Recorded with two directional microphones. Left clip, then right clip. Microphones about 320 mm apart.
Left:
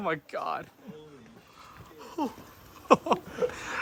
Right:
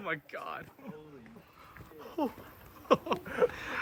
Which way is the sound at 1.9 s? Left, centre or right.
Centre.